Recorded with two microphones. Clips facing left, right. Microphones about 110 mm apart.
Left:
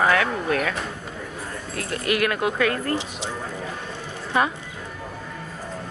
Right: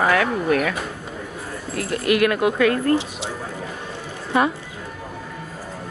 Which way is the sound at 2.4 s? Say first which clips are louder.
Right 4 dB; 20° right (ahead or behind).